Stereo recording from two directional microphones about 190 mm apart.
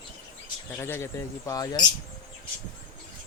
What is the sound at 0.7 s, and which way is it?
A man's voice, 10° left (ahead or behind).